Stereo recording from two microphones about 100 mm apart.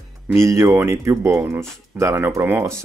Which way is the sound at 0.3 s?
30° right (ahead or behind).